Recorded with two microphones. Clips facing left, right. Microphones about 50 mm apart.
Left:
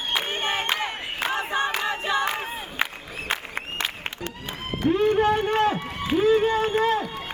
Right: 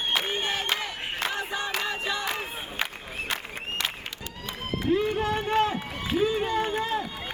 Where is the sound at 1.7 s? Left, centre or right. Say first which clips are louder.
Left 4 dB; left.